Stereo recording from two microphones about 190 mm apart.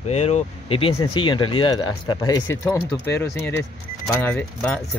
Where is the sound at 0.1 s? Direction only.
35° left (ahead or behind).